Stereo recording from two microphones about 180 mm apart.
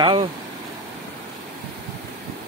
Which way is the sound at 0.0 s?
30° right (ahead or behind).